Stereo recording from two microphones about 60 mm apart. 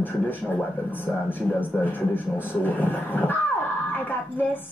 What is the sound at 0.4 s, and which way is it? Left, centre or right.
Speech, centre.